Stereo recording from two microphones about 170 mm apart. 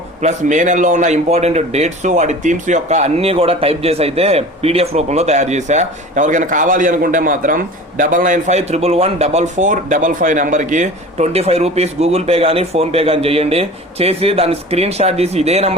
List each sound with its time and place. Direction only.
0.2 s a man's voice: 45° right (ahead or behind)